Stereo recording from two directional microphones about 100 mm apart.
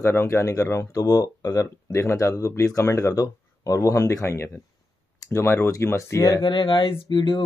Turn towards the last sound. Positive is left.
turn(degrees=50)  # may be behind; listen again after turning